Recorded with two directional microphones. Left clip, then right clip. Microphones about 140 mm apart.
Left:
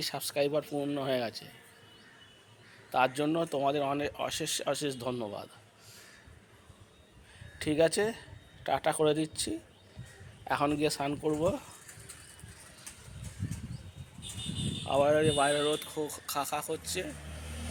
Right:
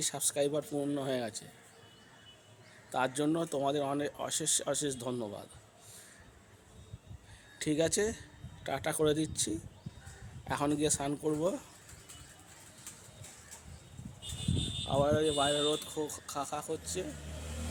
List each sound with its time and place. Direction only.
0.0 s a man's voice: 10° right (ahead or behind)
2.9 s a man's voice: 10° right (ahead or behind)
7.6 s a man's voice: 15° right (ahead or behind)
14.8 s speech: centre (ahead or behind)